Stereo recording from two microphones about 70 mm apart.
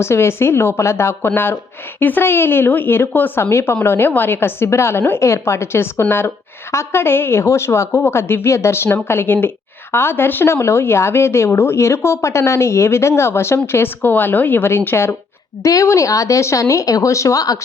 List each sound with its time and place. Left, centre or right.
0.0 s a woman's voice: left
15.6 s speech: left